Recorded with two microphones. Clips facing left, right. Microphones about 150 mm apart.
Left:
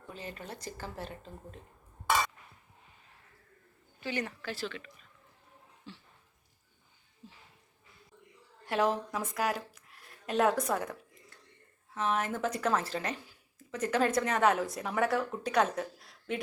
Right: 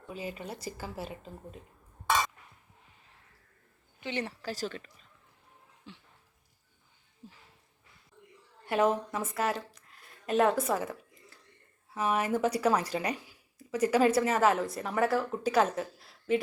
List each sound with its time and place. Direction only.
0.1 s speech: 10° right (ahead or behind)
4.0 s speech: 30° right (ahead or behind)
5.9 s speech: 15° right (ahead or behind)
8.6 s speech: 5° right (ahead or behind)